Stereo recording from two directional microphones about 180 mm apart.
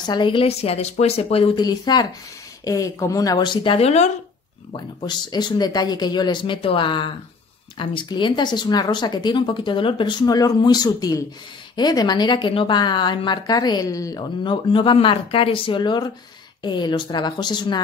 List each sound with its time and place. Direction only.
0.0 s a woman's voice: 25° left (ahead or behind)
4.7 s a woman's voice: 25° left (ahead or behind)